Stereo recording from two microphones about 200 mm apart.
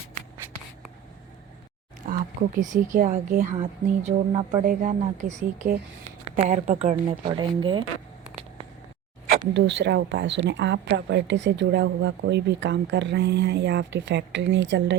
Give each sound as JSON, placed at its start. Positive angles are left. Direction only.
{"t": 2.0, "sound": "a sound", "side_deg": -45}
{"t": 2.6, "sound": "speech", "side_deg": -40}
{"t": 3.6, "sound": "speech", "side_deg": -25}
{"t": 4.6, "sound": "speech", "side_deg": -45}
{"t": 9.5, "sound": "speech", "side_deg": -60}